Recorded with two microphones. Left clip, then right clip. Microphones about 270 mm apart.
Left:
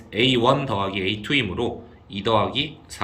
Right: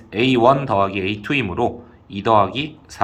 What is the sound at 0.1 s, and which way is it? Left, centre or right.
A man's voice, centre.